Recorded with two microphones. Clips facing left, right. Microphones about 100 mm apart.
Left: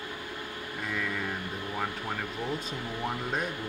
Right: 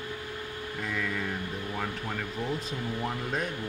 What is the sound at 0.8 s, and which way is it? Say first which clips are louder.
Speech: right 1 dB; 5° left (ahead or behind).